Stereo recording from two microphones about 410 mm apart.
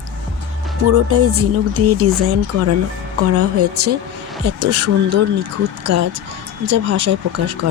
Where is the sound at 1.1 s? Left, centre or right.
Right.